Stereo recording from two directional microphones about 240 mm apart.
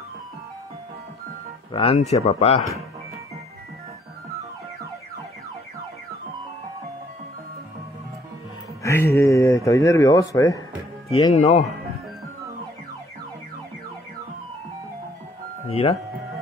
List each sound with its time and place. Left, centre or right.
1.7 s speech: left
8.8 s speech: centre
11.3 s speech: left
15.7 s speech: left